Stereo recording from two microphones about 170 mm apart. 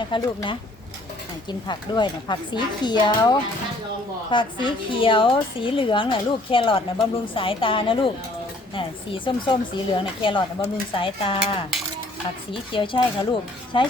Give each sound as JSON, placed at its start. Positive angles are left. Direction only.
{"t": 0.0, "sound": "a woman's voice", "side_deg": 30}
{"t": 4.6, "sound": "a woman's voice", "side_deg": 30}
{"t": 12.7, "sound": "a woman's voice", "side_deg": 30}